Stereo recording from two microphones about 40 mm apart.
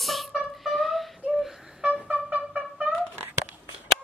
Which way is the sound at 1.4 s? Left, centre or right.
Centre.